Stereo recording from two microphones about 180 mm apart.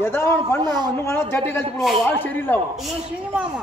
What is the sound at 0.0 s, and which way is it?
Speech, 15° left (ahead or behind).